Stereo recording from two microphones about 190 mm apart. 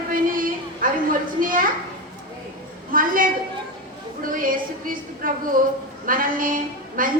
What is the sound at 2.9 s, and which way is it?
A woman's voice, 45° right (ahead or behind).